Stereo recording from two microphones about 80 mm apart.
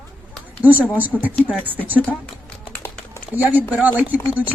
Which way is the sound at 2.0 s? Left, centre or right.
Centre.